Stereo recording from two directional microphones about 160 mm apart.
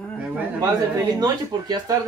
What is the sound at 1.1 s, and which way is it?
Speech, 25° right (ahead or behind).